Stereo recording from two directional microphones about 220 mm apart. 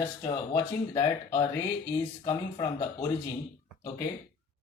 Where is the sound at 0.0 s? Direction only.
20° left (ahead or behind).